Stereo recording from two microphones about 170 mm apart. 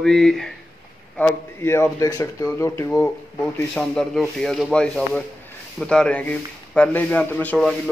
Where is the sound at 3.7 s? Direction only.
5° left (ahead or behind).